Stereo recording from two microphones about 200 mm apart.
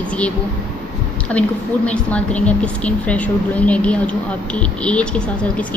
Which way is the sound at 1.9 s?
5° left (ahead or behind).